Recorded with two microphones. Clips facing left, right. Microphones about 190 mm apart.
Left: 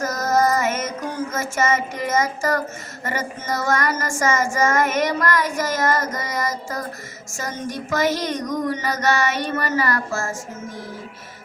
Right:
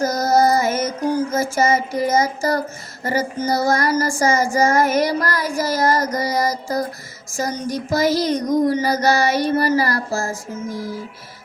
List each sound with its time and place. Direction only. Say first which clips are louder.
0.0 s music: right 4 dB; 35° right (ahead or behind)